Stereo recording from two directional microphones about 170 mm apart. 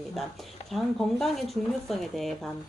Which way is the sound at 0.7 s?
Centre (ahead or behind).